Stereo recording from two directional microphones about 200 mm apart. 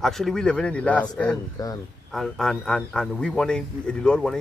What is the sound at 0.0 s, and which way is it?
Speech, centre (ahead or behind).